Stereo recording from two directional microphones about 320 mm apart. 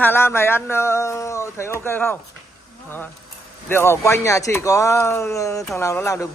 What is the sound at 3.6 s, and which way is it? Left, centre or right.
Speech, centre.